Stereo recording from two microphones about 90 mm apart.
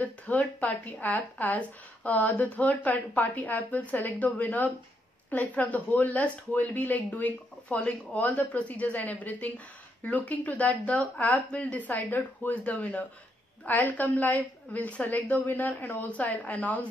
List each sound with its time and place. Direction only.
0.0 s a woman's voice: 15° left (ahead or behind)